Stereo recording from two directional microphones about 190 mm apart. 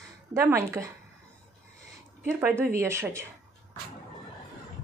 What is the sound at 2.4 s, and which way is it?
Speech, 10° right (ahead or behind).